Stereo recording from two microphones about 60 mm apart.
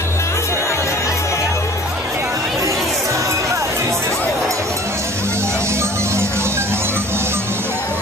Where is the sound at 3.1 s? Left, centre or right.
Right.